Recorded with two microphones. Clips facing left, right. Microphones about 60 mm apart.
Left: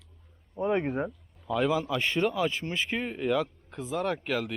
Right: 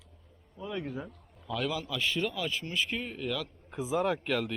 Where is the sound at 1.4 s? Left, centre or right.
Centre.